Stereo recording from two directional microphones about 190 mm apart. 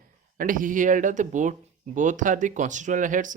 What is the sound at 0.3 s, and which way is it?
Speech, 45° right (ahead or behind).